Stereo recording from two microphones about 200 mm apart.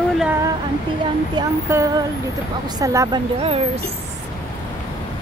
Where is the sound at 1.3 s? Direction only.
15° right (ahead or behind).